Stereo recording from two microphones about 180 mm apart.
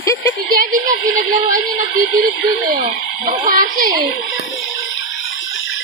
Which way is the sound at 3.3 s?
50° right (ahead or behind).